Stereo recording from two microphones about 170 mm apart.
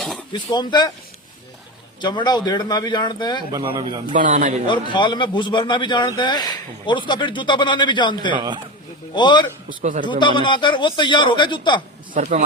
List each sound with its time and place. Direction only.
0.3 s a man's voice: 25° left (ahead or behind)
2.0 s a man's voice: 25° left (ahead or behind)
3.5 s a man's voice: 30° right (ahead or behind)
4.1 s a man's voice: 50° right (ahead or behind)
4.7 s a man's voice: 25° left (ahead or behind)
8.3 s a man's voice: 25° right (ahead or behind)
9.1 s a man's voice: 25° left (ahead or behind)
9.8 s a man's voice: 50° right (ahead or behind)
10.1 s a man's voice: 30° left (ahead or behind)